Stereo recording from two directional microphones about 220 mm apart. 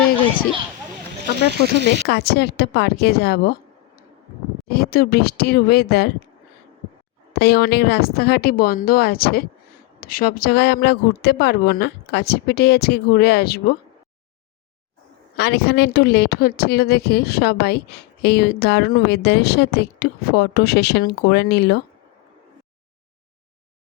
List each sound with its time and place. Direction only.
1.7 s speech: 50° right (ahead or behind)
2.0 s a woman's voice: 50° left (ahead or behind)
4.7 s a woman's voice: 45° left (ahead or behind)
7.3 s a woman's voice: 45° left (ahead or behind)
15.4 s a woman's voice: 45° left (ahead or behind)